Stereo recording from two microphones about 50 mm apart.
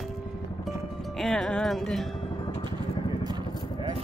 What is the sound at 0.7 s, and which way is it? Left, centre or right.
Music, centre.